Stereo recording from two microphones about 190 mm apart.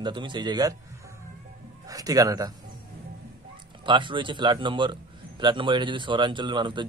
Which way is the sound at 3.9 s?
25° right (ahead or behind).